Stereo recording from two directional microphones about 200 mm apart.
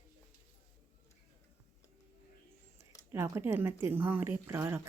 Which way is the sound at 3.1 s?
10° right (ahead or behind).